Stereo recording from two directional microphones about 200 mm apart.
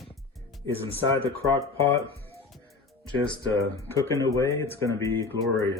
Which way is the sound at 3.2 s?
25° left (ahead or behind).